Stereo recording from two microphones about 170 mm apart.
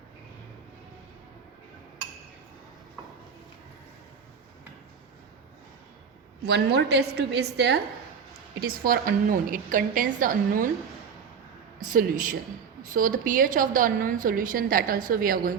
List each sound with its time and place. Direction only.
6.4 s a woman's voice: 75° right (ahead or behind)
8.6 s a woman's voice: 60° right (ahead or behind)
11.9 s a woman's voice: 55° right (ahead or behind)